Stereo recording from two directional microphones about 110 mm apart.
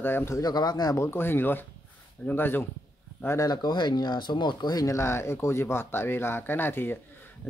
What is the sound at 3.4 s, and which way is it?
Speech, 40° left (ahead or behind).